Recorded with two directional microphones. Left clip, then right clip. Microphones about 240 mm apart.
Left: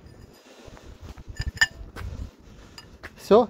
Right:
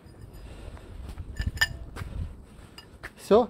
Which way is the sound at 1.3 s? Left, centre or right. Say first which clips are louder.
Left 4 dB; centre.